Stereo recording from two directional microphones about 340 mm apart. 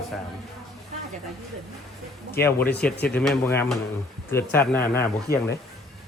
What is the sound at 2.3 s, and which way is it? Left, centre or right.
A man's voice, centre.